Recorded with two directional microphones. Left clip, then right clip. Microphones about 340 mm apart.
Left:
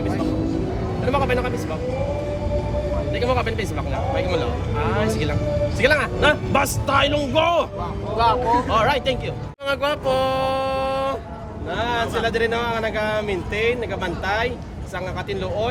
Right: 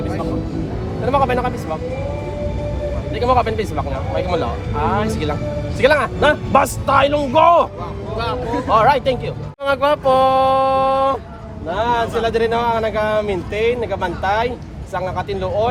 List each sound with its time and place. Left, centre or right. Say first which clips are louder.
1.0 s speech: right 5 dB; centre
3.2 s speech: right 8 dB; centre
8.7 s speech: right 6 dB; centre